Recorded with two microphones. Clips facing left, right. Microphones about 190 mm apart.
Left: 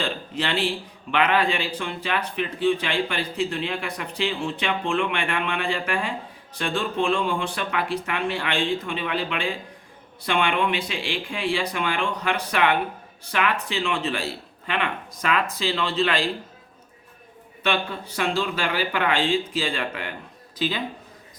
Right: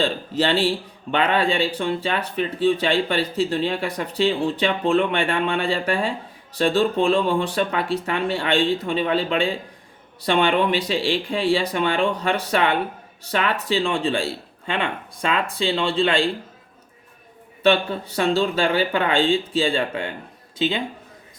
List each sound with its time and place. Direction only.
0.0 s speech: 30° right (ahead or behind)
18.2 s speech: 30° right (ahead or behind)